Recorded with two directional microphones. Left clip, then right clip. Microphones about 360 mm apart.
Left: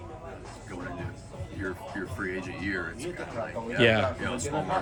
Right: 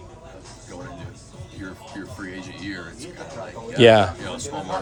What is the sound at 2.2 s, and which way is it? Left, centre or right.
Speech, centre.